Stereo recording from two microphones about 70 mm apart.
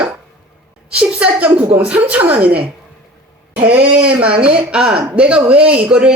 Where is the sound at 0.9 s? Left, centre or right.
Centre.